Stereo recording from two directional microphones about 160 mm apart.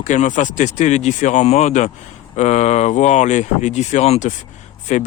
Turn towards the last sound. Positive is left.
turn(degrees=45)  # may be behind; listen again after turning